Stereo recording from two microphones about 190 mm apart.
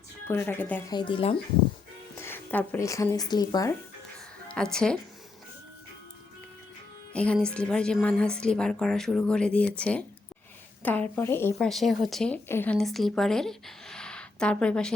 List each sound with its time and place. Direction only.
0.3 s speech: 10° left (ahead or behind)
0.9 s speech: 25° left (ahead or behind)
2.1 s speech: 10° left (ahead or behind)
4.4 s a woman's voice: 5° left (ahead or behind)
7.1 s a woman's voice: 5° left (ahead or behind)
11.5 s a woman's voice: centre (ahead or behind)